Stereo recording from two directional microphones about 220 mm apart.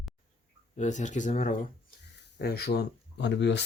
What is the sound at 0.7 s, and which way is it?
Speech, 35° left (ahead or behind).